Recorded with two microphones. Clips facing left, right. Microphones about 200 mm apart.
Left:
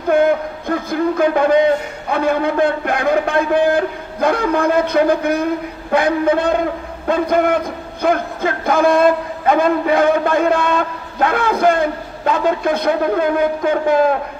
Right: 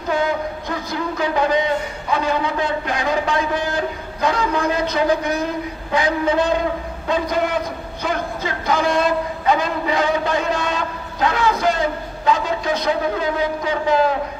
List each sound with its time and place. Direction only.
0.1 s speech: 55° left (ahead or behind)